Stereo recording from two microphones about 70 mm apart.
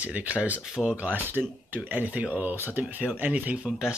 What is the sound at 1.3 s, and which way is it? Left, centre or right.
Speech, right.